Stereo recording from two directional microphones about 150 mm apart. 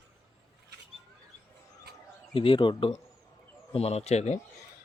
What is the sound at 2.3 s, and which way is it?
Speech, 35° left (ahead or behind).